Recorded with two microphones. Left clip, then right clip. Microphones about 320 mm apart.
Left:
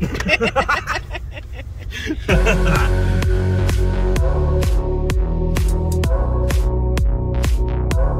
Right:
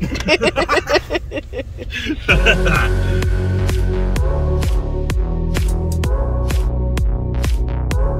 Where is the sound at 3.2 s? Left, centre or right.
Centre.